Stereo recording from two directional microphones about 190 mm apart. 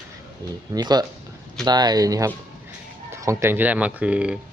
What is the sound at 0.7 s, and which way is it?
A man's voice, 20° right (ahead or behind).